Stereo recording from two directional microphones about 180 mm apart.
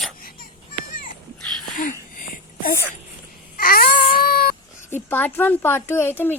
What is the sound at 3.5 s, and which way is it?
Baby cry, 55° left (ahead or behind).